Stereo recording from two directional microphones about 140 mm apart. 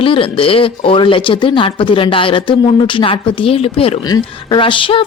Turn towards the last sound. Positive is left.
turn(degrees=40)  # may be behind; listen again after turning